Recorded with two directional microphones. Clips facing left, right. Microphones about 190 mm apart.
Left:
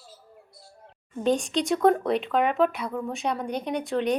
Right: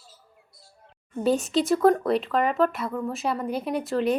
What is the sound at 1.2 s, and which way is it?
Speech, 5° right (ahead or behind).